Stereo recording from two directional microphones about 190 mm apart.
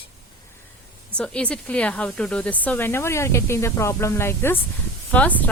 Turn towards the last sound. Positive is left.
turn(degrees=10)  # may be behind; listen again after turning